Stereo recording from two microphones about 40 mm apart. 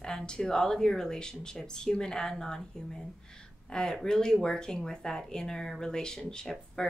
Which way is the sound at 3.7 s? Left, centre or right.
Centre.